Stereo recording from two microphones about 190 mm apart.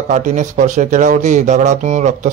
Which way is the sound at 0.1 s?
40° right (ahead or behind).